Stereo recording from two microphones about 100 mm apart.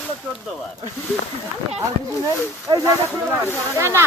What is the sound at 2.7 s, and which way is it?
Speech, 50° right (ahead or behind).